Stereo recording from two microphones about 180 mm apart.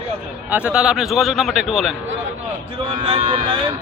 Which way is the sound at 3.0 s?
30° right (ahead or behind).